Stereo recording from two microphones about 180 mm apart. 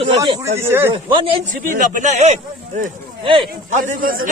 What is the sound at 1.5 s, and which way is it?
Speech, 50° right (ahead or behind).